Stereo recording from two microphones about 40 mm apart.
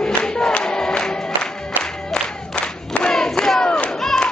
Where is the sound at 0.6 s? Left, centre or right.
Centre.